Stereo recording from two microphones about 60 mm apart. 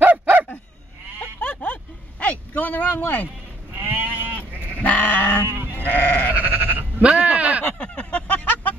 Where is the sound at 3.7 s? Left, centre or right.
Right.